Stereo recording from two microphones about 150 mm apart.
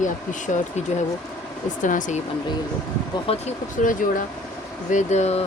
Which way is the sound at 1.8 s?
60° left (ahead or behind).